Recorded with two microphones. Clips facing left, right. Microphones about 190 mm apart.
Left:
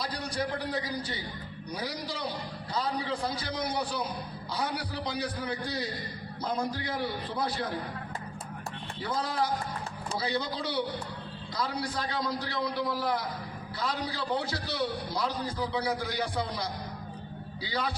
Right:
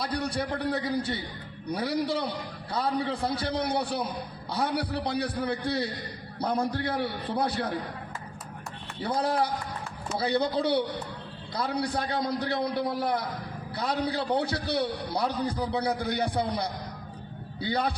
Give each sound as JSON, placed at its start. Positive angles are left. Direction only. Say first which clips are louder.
{"t": 0.0, "sound": "a man's voice", "louder": "right 3 dB", "side_deg": -60}
{"t": 9.2, "sound": "a man's voice", "louder": "right 3 dB", "side_deg": -60}